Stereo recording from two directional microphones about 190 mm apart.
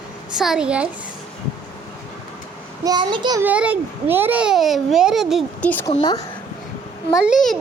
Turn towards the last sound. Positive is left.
turn(degrees=0)  # may be behind; listen again after turning